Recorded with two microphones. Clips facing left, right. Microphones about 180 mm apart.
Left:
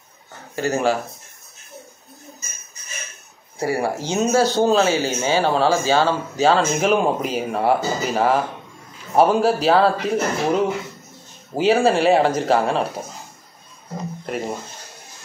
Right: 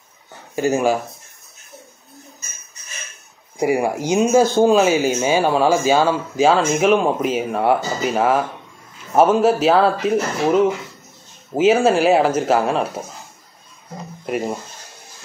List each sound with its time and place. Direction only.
0.6 s speech: 15° right (ahead or behind)
3.5 s speech: 15° right (ahead or behind)